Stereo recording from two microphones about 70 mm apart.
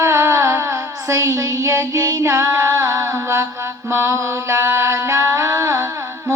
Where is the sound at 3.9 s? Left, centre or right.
Right.